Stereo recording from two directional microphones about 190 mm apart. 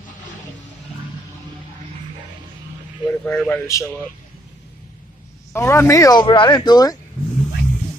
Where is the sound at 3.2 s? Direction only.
5° left (ahead or behind).